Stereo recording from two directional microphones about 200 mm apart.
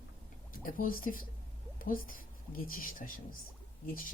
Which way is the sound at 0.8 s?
45° left (ahead or behind).